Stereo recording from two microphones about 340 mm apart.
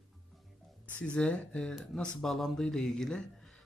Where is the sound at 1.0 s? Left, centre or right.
Centre.